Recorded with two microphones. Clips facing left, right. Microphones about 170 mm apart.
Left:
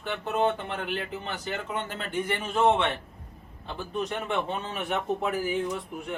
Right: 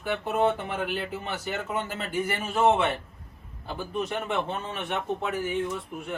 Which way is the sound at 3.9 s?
5° right (ahead or behind).